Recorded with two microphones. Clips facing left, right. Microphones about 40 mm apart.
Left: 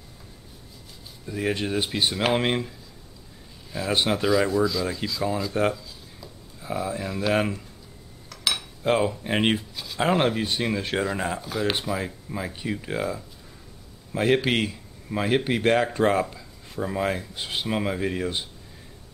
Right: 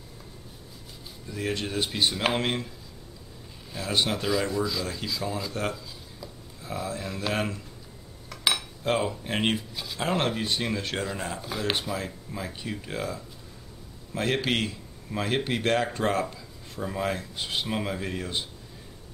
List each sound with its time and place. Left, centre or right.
1.2 s speech: centre
3.7 s speech: centre
4.9 s speech: centre
5.5 s speech: centre
8.8 s speech: centre
11.4 s speech: centre
11.7 s speech: centre